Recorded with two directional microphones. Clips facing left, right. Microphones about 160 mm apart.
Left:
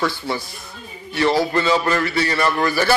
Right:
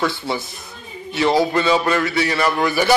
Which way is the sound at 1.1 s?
20° right (ahead or behind).